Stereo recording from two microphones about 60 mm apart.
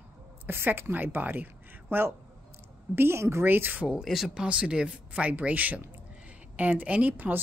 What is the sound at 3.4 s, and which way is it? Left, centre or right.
Speech, right.